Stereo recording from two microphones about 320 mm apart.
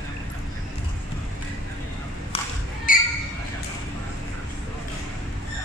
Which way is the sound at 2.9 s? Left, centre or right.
Left.